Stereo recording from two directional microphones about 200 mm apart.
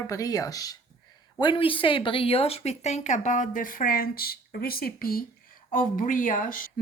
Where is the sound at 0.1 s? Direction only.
15° left (ahead or behind).